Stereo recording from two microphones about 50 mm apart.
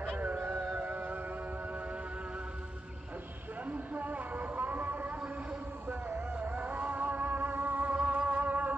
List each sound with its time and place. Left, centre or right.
0.2 s music: right
3.6 s vehicle: right
6.3 s music: right